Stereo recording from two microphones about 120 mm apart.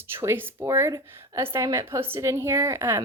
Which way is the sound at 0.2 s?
20° right (ahead or behind).